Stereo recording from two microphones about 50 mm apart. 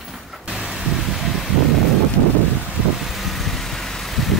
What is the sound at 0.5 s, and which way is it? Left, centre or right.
Vehicle, centre.